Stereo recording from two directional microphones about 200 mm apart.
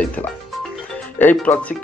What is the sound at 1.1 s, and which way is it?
Speech, 10° left (ahead or behind).